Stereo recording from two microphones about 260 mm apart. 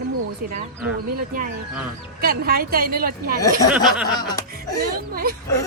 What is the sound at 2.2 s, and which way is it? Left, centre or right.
Speech, right.